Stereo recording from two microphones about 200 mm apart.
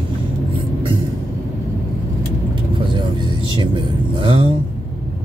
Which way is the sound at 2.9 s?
25° right (ahead or behind).